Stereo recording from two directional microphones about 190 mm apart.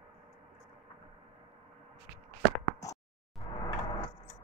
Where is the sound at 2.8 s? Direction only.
15° left (ahead or behind).